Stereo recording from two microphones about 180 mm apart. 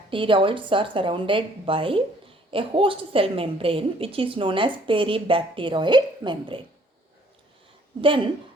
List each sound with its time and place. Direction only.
0.1 s a woman's voice: 30° right (ahead or behind)